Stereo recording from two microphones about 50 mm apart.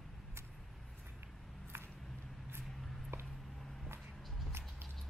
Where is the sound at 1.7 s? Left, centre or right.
Right.